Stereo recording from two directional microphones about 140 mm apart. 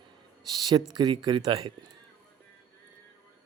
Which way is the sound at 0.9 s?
30° right (ahead or behind).